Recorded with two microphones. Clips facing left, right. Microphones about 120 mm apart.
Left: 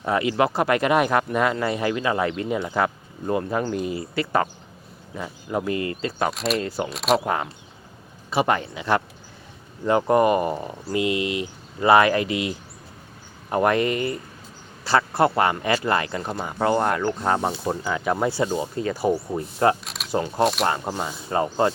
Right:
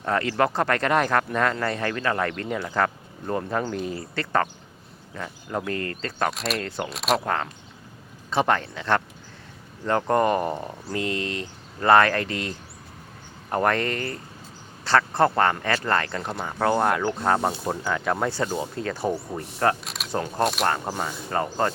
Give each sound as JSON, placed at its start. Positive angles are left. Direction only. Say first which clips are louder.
{"t": 0.0, "sound": "speech", "louder": "left 2 dB", "side_deg": 10}
{"t": 7.3, "sound": "speech", "louder": "left 2 dB", "side_deg": 10}
{"t": 21.0, "sound": "speech", "louder": "left 2 dB", "side_deg": 15}